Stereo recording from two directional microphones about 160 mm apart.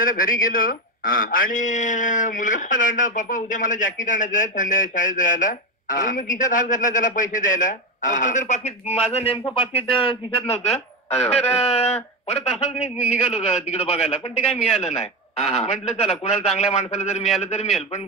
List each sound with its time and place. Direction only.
0.0 s a man's voice: 60° left (ahead or behind); by 10.6 s 40° left (ahead or behind)
10.7 s speech: 5° left (ahead or behind)
12.3 s a man's voice: 40° left (ahead or behind)